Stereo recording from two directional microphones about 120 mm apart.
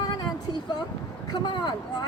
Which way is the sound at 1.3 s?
40° left (ahead or behind).